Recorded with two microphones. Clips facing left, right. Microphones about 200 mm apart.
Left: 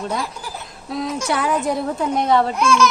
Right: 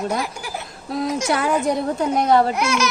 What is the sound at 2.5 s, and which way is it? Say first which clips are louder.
Speech: left 3 dB; 65° right (ahead or behind).